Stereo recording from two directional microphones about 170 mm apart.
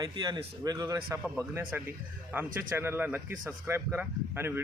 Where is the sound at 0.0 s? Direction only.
25° right (ahead or behind).